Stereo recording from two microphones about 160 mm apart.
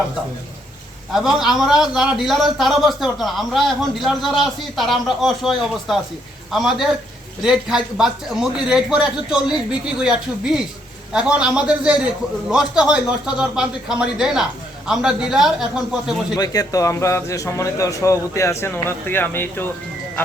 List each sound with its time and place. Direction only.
1.1 s a man's voice: 5° right (ahead or behind)
16.4 s speech: 20° left (ahead or behind)